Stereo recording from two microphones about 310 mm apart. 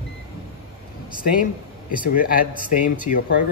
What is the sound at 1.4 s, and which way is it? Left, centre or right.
Speech, left.